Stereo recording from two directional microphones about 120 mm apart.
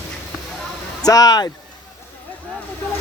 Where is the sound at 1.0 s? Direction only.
30° left (ahead or behind).